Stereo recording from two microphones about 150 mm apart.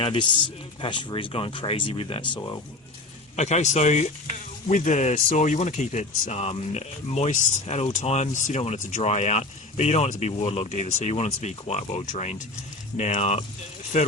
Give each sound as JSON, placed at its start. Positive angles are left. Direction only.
{"t": 0.0, "sound": "speech", "side_deg": 35}
{"t": 3.3, "sound": "speech", "side_deg": 50}